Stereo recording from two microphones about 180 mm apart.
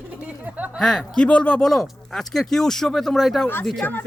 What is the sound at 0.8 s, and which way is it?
Speech, 5° left (ahead or behind).